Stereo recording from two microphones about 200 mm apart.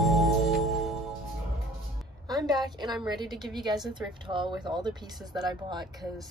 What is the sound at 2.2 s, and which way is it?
A woman's voice, 20° right (ahead or behind).